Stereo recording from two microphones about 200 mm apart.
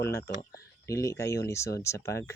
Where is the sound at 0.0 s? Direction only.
10° left (ahead or behind).